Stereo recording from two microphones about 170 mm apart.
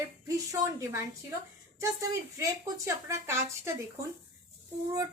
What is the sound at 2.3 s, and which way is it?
A woman's voice, 15° right (ahead or behind).